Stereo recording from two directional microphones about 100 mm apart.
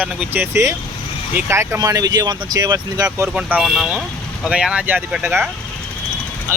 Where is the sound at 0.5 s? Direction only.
25° right (ahead or behind).